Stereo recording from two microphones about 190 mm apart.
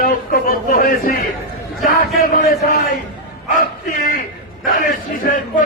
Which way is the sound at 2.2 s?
50° left (ahead or behind).